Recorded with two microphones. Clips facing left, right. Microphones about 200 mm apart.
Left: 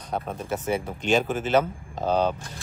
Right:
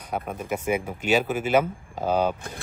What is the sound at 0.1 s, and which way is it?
Speech, 10° right (ahead or behind).